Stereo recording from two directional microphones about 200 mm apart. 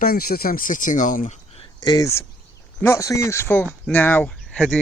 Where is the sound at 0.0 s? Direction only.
45° left (ahead or behind).